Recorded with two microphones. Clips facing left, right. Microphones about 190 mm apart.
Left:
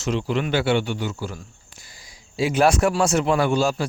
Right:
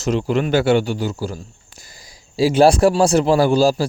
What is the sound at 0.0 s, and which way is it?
A man's voice, 45° right (ahead or behind).